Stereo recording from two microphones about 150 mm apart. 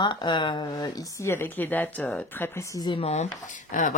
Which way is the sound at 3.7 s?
60° left (ahead or behind).